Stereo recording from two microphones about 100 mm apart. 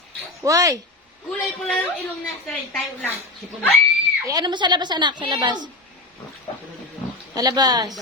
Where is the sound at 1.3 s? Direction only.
10° left (ahead or behind).